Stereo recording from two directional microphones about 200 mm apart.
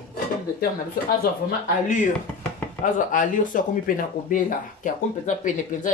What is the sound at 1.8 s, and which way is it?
Speech, 40° left (ahead or behind).